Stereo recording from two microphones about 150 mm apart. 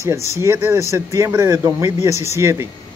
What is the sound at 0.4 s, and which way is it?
Speech, 20° right (ahead or behind).